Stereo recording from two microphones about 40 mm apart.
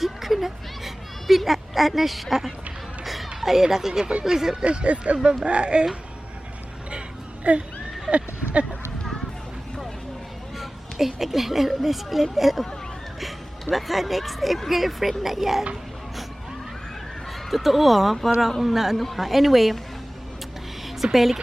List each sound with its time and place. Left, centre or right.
0.0 s a sound: centre
3.4 s speech: centre
4.6 s speech: right
5.1 s speech: centre
7.5 s speech: right
8.1 s speech: centre
10.6 s a woman's voice: centre
17.5 s speech: centre
20.8 s a sound: centre